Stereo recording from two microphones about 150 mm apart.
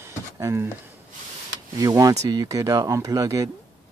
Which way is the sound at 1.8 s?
25° right (ahead or behind).